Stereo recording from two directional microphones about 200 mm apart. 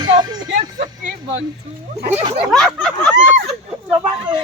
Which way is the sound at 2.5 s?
Centre (ahead or behind).